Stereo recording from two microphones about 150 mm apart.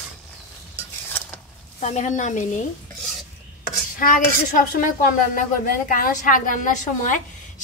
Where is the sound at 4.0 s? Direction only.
65° left (ahead or behind).